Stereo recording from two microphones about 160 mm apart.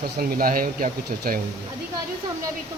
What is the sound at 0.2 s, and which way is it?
Speech, 65° right (ahead or behind).